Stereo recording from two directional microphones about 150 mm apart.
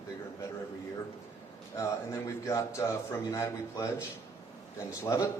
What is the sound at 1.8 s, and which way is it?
A man's voice, 20° left (ahead or behind).